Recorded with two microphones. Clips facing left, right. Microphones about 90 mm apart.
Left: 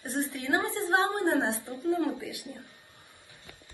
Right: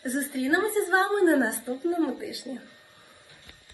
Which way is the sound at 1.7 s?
20° right (ahead or behind).